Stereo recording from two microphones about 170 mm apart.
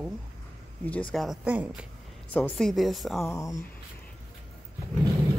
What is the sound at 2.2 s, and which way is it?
A woman's voice, 10° left (ahead or behind).